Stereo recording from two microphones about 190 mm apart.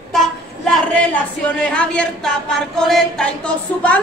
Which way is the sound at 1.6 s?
5° left (ahead or behind).